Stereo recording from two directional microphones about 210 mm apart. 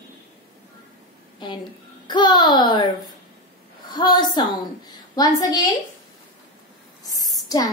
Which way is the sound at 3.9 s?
20° left (ahead or behind).